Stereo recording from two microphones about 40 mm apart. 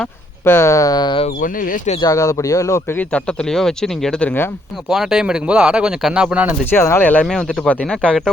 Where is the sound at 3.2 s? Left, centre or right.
Centre.